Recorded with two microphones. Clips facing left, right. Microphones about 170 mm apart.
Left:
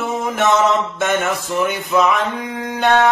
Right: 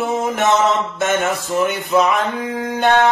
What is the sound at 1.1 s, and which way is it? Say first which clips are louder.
Music: right 2 dB; 40° right (ahead or behind).